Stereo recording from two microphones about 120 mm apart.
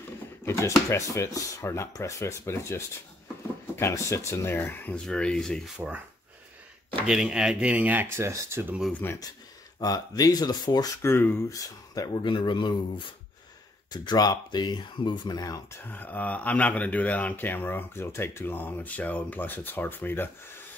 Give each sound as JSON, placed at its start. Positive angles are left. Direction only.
{"t": 0.5, "sound": "speech", "side_deg": 25}
{"t": 5.8, "sound": "speech", "side_deg": -15}
{"t": 7.1, "sound": "speech", "side_deg": -5}
{"t": 8.9, "sound": "speech", "side_deg": 20}
{"t": 9.8, "sound": "speech", "side_deg": 30}
{"t": 11.0, "sound": "speech", "side_deg": 20}
{"t": 15.8, "sound": "speech", "side_deg": 15}